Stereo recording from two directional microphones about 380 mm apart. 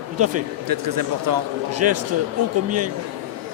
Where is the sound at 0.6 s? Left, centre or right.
Right.